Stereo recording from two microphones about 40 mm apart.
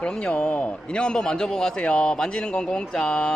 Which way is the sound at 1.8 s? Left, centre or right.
Left.